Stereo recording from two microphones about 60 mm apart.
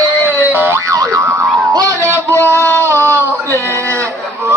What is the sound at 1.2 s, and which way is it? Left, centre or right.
Music, right.